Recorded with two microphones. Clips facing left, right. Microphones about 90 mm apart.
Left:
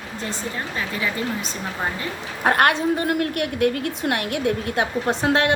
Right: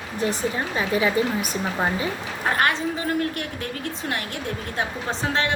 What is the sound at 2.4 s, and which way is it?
A woman's voice, 60° left (ahead or behind).